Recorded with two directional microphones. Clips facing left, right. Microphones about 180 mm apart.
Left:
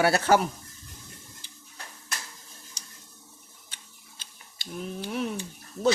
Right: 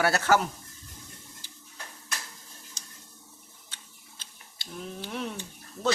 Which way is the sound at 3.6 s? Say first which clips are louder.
Even; 15° left (ahead or behind).